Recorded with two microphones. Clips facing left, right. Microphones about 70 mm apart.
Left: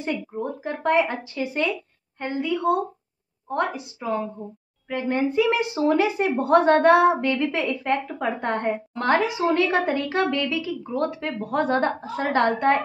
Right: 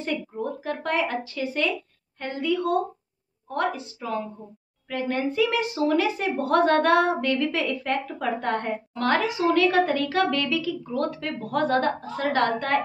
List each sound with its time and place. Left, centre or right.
0.0 s speech: left